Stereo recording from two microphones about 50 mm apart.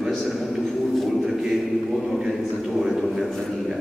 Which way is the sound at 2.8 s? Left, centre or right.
Centre.